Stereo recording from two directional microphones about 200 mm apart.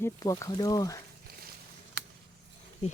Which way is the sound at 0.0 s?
15° left (ahead or behind).